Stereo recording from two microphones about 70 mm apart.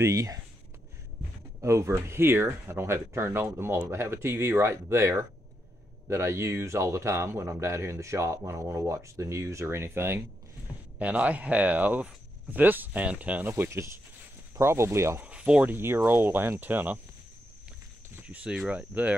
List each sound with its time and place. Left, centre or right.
0.0 s speech: right
1.6 s speech: right
11.0 s speech: centre
13.5 s speech: right
15.2 s a sound: centre
15.7 s speech: right
18.2 s speech: centre